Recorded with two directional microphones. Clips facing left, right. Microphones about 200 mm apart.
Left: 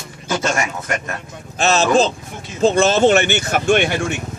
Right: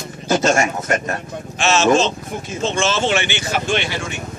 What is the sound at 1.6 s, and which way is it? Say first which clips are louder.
Speech: even; 35° left (ahead or behind).